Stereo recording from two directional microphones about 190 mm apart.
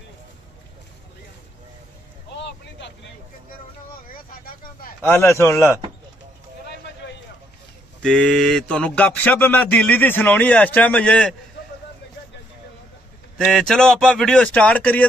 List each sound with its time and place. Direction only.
2.3 s vehicle: 65° left (ahead or behind)
4.1 s a sound: 50° left (ahead or behind)
5.0 s speech: 15° left (ahead or behind)
8.0 s speech: 5° left (ahead or behind)
13.4 s speech: 5° left (ahead or behind)